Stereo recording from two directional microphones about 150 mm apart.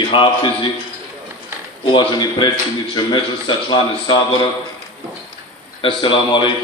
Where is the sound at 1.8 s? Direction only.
35° left (ahead or behind).